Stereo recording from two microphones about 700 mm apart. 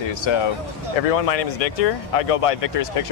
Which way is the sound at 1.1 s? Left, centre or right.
Left.